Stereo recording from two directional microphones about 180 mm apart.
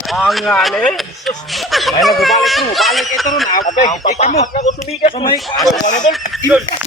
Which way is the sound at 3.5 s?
45° left (ahead or behind).